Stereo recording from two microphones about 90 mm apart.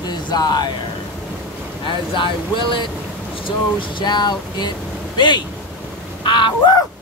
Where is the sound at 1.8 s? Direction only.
65° left (ahead or behind).